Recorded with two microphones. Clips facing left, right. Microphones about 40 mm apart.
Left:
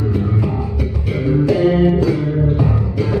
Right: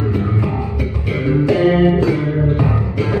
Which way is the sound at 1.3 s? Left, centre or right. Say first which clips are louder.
Right 1 dB; centre.